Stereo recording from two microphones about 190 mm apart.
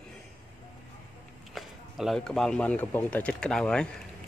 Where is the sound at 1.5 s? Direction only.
Centre (ahead or behind).